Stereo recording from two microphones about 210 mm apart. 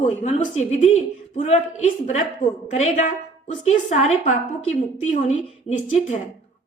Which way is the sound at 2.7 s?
35° left (ahead or behind).